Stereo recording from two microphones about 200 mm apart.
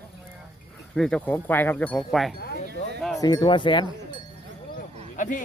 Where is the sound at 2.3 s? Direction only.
50° left (ahead or behind).